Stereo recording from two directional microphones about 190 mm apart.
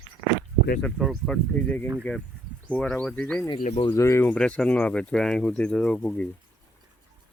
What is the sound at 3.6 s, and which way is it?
Speech, 40° left (ahead or behind).